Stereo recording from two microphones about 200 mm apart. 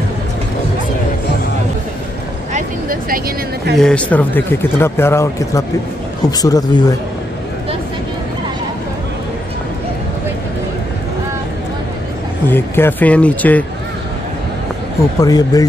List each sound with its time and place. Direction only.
2.5 s vehicle: 45° right (ahead or behind)
3.7 s speech: 5° left (ahead or behind)
12.4 s speech: 10° left (ahead or behind)
15.1 s speech: 20° left (ahead or behind)